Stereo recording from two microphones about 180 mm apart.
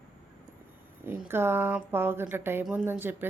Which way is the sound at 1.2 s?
15° right (ahead or behind).